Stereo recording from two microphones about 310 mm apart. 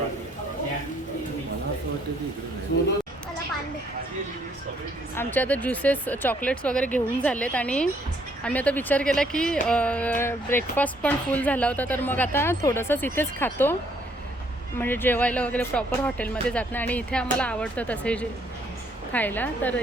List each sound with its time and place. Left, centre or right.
2.7 s speech: left
5.1 s speech: centre
14.8 s speech: centre